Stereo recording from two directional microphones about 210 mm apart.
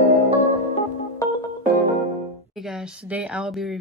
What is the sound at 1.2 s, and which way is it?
Music, 15° left (ahead or behind).